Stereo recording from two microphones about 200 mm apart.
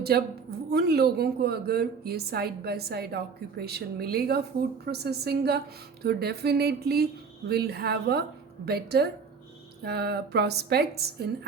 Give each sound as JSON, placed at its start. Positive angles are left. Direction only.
{"t": 0.7, "sound": "a woman's voice", "side_deg": -50}